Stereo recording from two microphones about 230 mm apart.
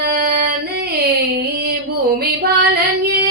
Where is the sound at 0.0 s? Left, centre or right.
Right.